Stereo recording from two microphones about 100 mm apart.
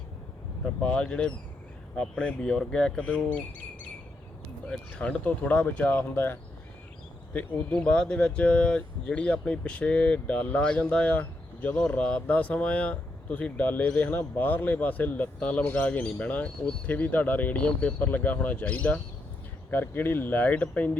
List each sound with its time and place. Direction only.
0.6 s speech: 10° left (ahead or behind)
4.7 s speech: 10° left (ahead or behind)